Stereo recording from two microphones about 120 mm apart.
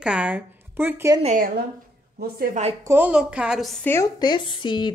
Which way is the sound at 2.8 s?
20° right (ahead or behind).